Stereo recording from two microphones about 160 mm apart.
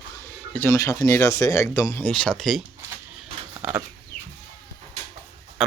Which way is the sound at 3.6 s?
15° right (ahead or behind).